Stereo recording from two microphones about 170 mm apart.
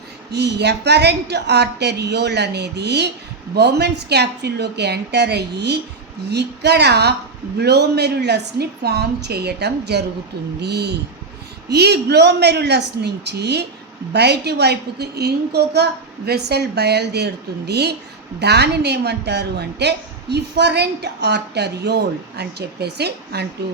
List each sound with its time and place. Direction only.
0.3 s a woman's voice: 80° right